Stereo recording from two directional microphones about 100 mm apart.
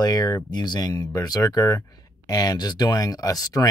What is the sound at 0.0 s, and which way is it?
Speech, 40° left (ahead or behind).